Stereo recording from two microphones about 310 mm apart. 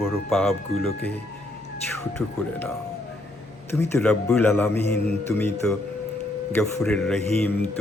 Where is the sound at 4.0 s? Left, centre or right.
Centre.